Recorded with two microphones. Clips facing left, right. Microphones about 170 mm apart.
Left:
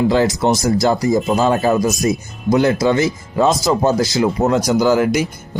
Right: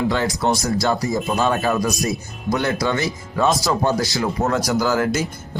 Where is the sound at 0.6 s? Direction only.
20° left (ahead or behind).